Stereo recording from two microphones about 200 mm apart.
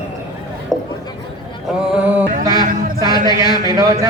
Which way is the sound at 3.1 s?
20° left (ahead or behind).